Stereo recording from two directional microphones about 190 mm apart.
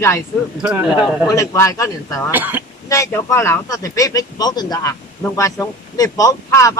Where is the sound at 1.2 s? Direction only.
15° left (ahead or behind).